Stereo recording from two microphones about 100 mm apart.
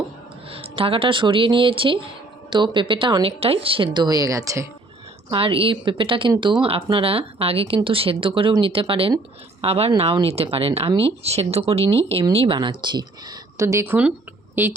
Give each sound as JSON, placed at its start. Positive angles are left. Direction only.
{"t": 0.5, "sound": "speech", "side_deg": -70}
{"t": 3.2, "sound": "speech", "side_deg": -70}
{"t": 5.3, "sound": "speech", "side_deg": -65}
{"t": 9.6, "sound": "speech", "side_deg": -85}
{"t": 11.2, "sound": "speech", "side_deg": -90}
{"t": 12.5, "sound": "speech", "side_deg": -50}
{"t": 13.6, "sound": "speech", "side_deg": -30}
{"t": 13.8, "sound": "speech", "side_deg": -20}